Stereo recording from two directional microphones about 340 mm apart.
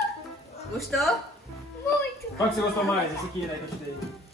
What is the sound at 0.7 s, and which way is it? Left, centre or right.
Speech, centre.